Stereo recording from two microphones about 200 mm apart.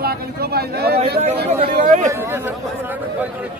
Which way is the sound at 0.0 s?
50° right (ahead or behind).